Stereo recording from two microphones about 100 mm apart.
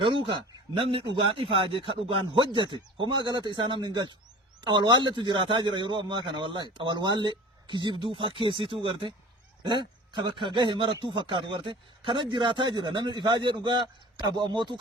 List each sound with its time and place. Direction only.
0.0 s a man's voice: 60° right (ahead or behind)
9.6 s speech: 50° right (ahead or behind)